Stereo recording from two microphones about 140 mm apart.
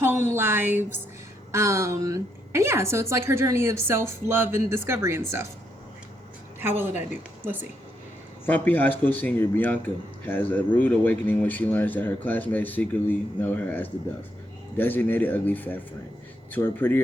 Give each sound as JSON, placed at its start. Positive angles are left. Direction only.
{"t": 0.0, "sound": "a woman's voice", "side_deg": -15}
{"t": 6.6, "sound": "a woman's voice", "side_deg": -15}
{"t": 8.4, "sound": "speech", "side_deg": 10}